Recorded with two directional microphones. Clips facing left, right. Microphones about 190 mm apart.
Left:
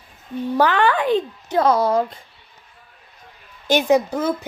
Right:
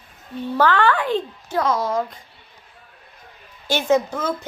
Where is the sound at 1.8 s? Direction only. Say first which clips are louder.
Left 4 dB; 35° left (ahead or behind).